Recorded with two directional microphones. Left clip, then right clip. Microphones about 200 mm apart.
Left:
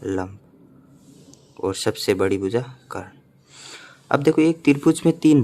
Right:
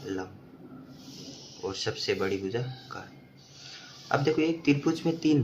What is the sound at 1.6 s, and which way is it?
Speech, 55° left (ahead or behind).